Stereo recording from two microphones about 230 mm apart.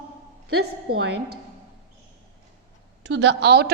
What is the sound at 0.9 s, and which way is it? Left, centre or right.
Speech, right.